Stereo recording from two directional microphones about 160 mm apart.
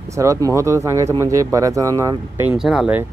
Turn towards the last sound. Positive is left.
turn(degrees=-5)  # may be behind; listen again after turning